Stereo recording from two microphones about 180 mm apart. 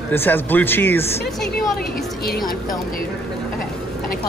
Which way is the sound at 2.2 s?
60° left (ahead or behind).